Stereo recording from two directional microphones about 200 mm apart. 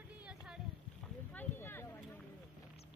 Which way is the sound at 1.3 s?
10° left (ahead or behind).